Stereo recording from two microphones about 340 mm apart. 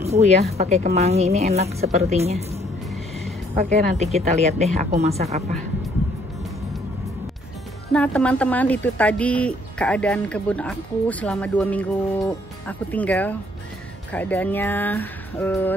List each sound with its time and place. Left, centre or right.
0.0 s a woman's voice: centre
3.7 s a woman's voice: centre
7.9 s speech: centre